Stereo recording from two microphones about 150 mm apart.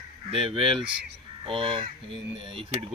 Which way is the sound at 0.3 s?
35° right (ahead or behind).